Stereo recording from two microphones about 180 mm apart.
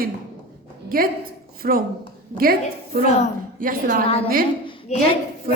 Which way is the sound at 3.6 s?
50° right (ahead or behind).